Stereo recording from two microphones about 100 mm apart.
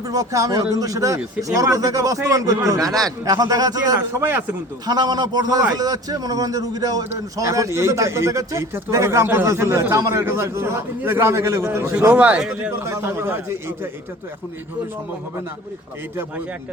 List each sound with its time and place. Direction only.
0.1 s speech: 35° right (ahead or behind)
4.2 s a man's voice: 20° right (ahead or behind)
4.9 s a man's voice: 45° right (ahead or behind); by 11.9 s 25° right (ahead or behind)
12.0 s a man's voice: 15° right (ahead or behind)
12.8 s a man's voice: 25° right (ahead or behind)